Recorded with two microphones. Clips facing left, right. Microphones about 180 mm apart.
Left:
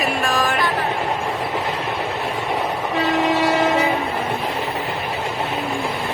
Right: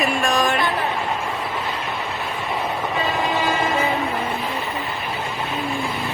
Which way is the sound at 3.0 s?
80° left.